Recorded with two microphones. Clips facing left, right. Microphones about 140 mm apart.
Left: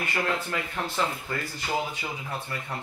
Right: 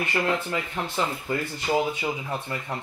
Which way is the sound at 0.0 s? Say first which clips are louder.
Right 3 dB; 20° right (ahead or behind).